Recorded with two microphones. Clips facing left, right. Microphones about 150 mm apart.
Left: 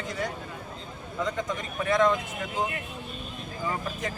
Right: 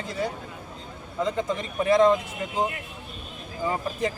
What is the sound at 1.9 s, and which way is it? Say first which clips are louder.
Speech: right 5 dB; 30° right (ahead or behind).